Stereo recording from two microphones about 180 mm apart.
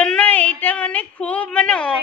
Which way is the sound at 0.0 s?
5° left (ahead or behind).